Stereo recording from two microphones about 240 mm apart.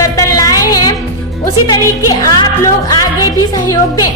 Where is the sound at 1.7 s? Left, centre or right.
Centre.